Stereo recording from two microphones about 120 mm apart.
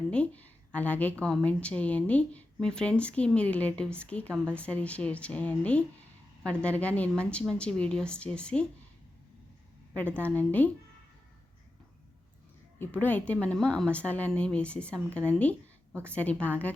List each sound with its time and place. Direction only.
0.1 s speech: 10° left (ahead or behind)
10.2 s speech: 15° left (ahead or behind)
12.8 s speech: 15° left (ahead or behind)